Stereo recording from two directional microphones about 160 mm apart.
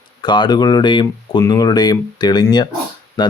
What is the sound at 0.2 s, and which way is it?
Speech, 30° left (ahead or behind).